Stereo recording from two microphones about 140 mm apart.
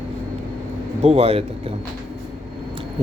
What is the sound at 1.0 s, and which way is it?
Speech, 45° right (ahead or behind).